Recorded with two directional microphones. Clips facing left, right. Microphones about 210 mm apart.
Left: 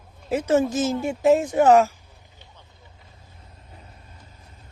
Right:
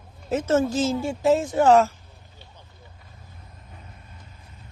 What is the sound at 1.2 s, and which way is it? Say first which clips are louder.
Speech: left 2 dB; 20° left (ahead or behind).